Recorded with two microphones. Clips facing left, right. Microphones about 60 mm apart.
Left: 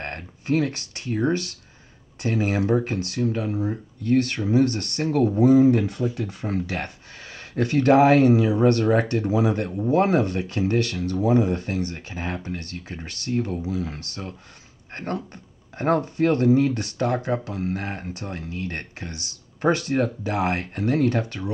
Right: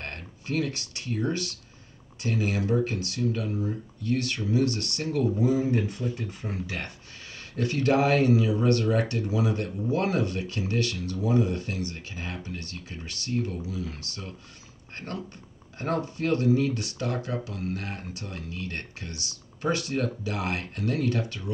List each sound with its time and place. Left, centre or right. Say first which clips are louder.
0.0 s speech: left 5 dB; left
6.1 s speech: left 6 dB; left
6.5 s speech: left 8 dB; left
7.5 s speech: left 7 dB; left